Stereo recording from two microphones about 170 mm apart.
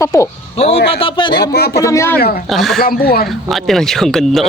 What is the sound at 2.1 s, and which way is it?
Speech, 60° left (ahead or behind).